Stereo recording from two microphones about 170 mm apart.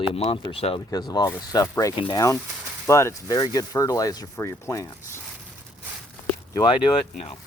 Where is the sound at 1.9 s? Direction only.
30° left (ahead or behind).